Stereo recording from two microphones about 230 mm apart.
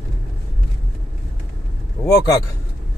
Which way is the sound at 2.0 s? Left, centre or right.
Centre.